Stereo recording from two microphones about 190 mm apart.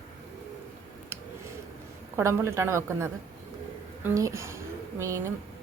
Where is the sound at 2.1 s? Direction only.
15° right (ahead or behind).